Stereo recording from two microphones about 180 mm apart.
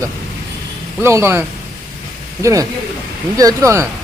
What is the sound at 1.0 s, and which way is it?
Speech, 15° right (ahead or behind).